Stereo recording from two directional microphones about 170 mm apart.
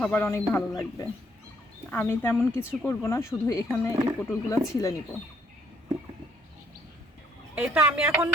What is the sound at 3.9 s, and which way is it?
Speech, 20° right (ahead or behind).